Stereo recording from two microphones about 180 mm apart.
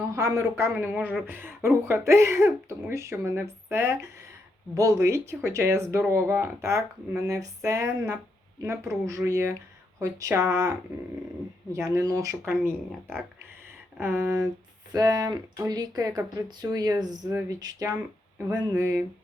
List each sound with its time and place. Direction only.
0.2 s speech: 15° right (ahead or behind)
11.7 s speech: 15° right (ahead or behind)
14.0 s speech: 15° right (ahead or behind)